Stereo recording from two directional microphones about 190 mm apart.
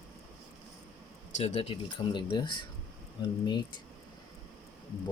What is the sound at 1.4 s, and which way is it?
Speech, 35° left (ahead or behind).